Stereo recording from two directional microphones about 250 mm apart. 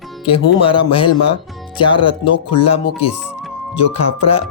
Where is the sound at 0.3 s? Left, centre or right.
Left.